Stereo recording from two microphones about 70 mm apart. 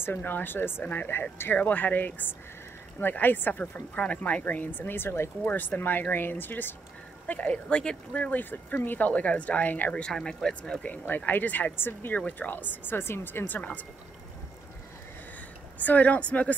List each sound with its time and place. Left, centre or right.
0.0 s speech: left
7.6 s speech: centre
8.1 s speech: left
10.0 s speech: centre
15.8 s speech: left